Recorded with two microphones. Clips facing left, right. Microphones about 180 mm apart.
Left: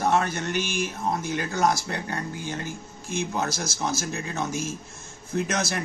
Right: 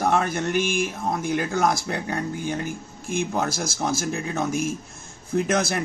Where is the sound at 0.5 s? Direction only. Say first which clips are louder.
Right 6 dB; 50° right (ahead or behind).